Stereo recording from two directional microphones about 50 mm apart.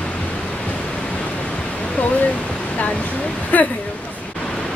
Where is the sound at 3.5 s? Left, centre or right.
Left.